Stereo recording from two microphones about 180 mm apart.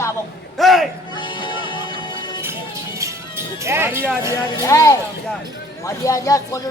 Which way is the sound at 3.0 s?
15° right (ahead or behind).